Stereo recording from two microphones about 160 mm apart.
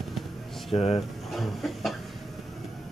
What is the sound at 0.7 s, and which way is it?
Speech, 40° left (ahead or behind).